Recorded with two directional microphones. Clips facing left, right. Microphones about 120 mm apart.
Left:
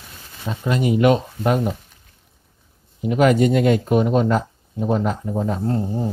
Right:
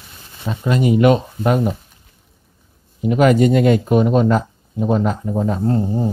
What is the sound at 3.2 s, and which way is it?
Speech, 70° right (ahead or behind).